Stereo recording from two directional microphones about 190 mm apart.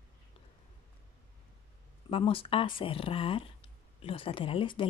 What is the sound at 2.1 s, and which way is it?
Speech, 30° left (ahead or behind).